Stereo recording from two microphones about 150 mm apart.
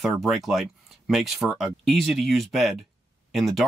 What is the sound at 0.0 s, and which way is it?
Speech, centre (ahead or behind).